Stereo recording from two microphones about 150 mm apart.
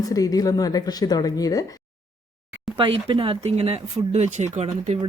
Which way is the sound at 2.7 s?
35° right (ahead or behind).